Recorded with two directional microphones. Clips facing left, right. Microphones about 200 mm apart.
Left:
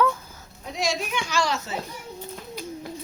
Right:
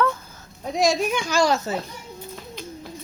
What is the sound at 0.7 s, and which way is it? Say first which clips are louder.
Speech: right 7 dB; 45° right (ahead or behind).